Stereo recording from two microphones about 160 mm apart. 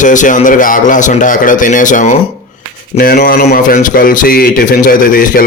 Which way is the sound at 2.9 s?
65° left (ahead or behind).